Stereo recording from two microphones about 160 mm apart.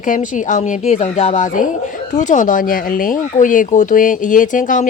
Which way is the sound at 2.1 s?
50° left (ahead or behind).